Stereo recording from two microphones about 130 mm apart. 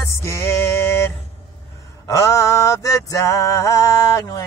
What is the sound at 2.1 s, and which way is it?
Mantra, 25° left (ahead or behind).